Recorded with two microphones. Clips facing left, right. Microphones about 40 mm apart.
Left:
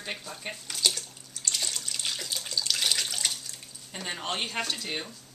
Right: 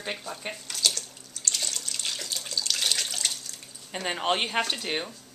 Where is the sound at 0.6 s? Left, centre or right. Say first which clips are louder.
Even; centre.